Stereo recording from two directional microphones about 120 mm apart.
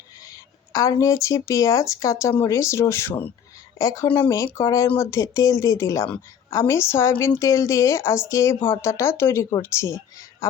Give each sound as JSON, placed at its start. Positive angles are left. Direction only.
{"t": 0.3, "sound": "a woman's voice", "side_deg": 30}
{"t": 3.8, "sound": "a woman's voice", "side_deg": 25}